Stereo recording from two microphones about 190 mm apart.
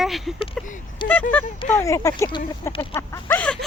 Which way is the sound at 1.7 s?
15° left (ahead or behind).